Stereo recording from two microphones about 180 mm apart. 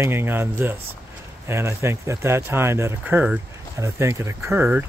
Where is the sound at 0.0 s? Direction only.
10° right (ahead or behind).